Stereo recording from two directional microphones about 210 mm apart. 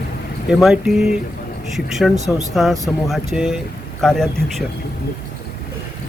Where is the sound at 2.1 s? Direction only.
35° right (ahead or behind).